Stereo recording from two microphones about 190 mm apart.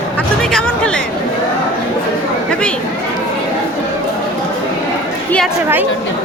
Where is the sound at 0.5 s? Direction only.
5° left (ahead or behind).